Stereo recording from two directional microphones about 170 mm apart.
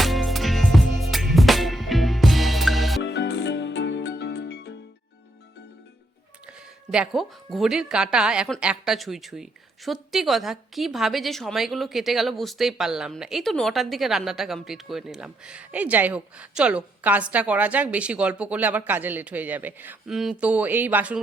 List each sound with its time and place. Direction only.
0.0 s music: centre (ahead or behind)
3.0 s music: 90° left
6.9 s speech: 5° right (ahead or behind)